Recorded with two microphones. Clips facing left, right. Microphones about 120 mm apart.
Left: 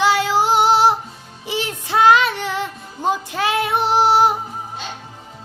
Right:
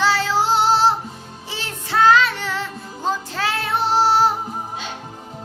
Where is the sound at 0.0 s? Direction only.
15° left (ahead or behind).